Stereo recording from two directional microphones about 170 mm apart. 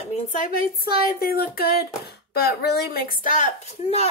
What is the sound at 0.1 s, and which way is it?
Speech, 50° left (ahead or behind).